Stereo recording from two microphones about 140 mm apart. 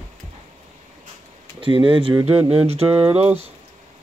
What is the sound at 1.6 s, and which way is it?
Speech, 35° right (ahead or behind).